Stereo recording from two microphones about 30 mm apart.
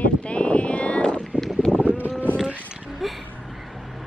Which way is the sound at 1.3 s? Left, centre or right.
Right.